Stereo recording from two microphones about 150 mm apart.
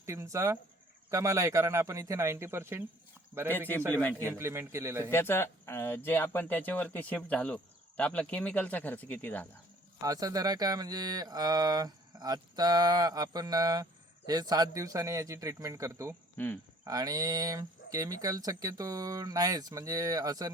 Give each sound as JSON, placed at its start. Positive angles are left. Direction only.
{"t": 0.0, "sound": "speech", "side_deg": -20}
{"t": 4.2, "sound": "a man's voice", "side_deg": -15}
{"t": 5.1, "sound": "speech", "side_deg": 15}
{"t": 10.0, "sound": "speech", "side_deg": -25}
{"t": 16.4, "sound": "speech", "side_deg": 10}
{"t": 16.8, "sound": "speech", "side_deg": -25}